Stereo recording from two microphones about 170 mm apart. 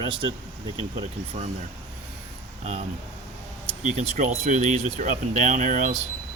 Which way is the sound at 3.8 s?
45° right (ahead or behind).